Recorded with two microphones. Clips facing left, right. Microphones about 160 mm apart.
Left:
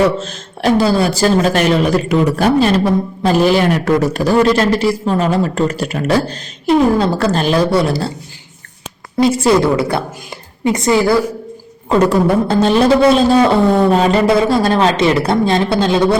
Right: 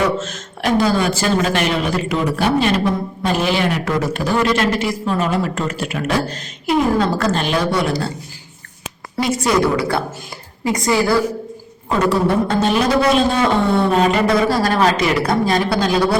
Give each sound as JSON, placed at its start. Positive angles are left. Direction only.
{"t": 0.2, "sound": "speech", "side_deg": 30}
{"t": 9.2, "sound": "a man's voice", "side_deg": 25}
{"t": 12.5, "sound": "a man's voice", "side_deg": 35}